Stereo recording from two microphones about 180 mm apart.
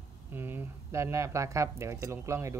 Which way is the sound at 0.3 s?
10° right (ahead or behind).